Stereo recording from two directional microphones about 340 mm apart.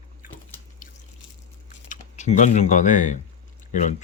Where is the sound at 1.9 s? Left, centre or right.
Left.